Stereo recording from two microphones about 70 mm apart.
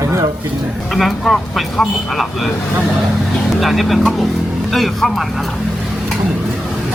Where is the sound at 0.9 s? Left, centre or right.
Centre.